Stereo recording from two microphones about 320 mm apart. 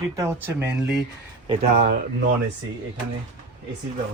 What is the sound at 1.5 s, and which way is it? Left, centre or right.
Speech, right.